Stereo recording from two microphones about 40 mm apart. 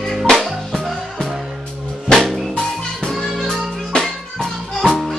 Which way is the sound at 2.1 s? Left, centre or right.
Centre.